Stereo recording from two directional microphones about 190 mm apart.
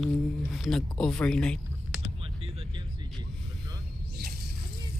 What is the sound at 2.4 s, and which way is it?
Music, 30° right (ahead or behind).